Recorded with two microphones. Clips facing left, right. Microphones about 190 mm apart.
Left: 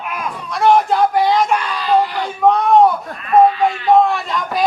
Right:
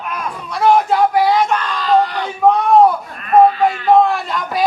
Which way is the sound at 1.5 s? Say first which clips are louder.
Even; 10° left (ahead or behind).